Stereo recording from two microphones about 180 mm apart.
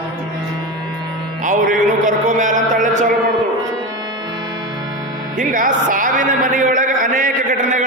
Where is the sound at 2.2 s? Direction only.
45° right (ahead or behind).